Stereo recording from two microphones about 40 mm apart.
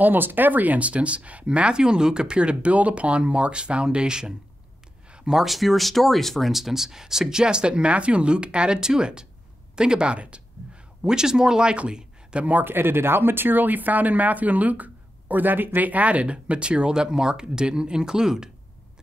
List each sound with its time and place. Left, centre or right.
0.0 s speech: right; by 4.3 s centre
5.3 s speech: centre
6.5 s speech: centre; by 10.4 s right
11.0 s speech: centre
11.9 s a sound: right
12.6 s speech: right; by 18.5 s centre